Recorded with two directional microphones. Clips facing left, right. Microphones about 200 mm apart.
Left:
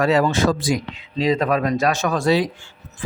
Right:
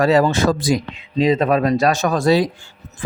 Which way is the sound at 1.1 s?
20° right (ahead or behind).